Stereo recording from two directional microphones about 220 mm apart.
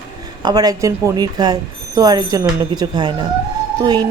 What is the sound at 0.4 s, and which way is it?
A woman's voice, 15° right (ahead or behind).